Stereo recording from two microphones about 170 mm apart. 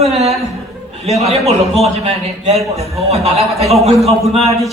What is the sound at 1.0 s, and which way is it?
A man's voice, 40° right (ahead or behind).